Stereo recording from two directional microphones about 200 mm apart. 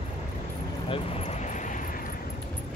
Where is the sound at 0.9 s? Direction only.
30° left (ahead or behind).